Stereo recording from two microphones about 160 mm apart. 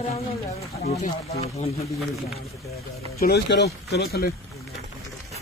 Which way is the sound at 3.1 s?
80° left.